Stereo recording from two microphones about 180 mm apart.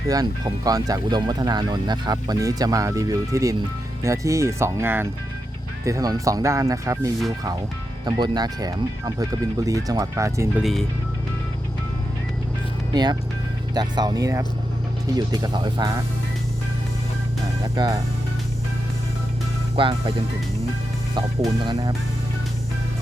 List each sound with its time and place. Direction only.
0.1 s speech: 20° right (ahead or behind)
10.6 s speech: centre (ahead or behind)
12.9 s speech: 25° right (ahead or behind)
17.7 s speech: 25° right (ahead or behind)
19.7 s speech: 30° right (ahead or behind)
21.2 s speech: 20° right (ahead or behind)